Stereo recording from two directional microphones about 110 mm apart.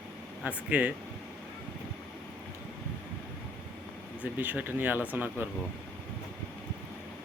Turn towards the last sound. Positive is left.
turn(degrees=-15)  # may be behind; listen again after turning